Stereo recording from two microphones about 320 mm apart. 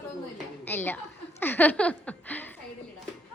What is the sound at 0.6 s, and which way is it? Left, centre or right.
Speech, centre.